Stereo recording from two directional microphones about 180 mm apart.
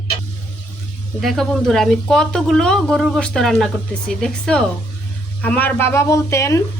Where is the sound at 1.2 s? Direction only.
Centre (ahead or behind).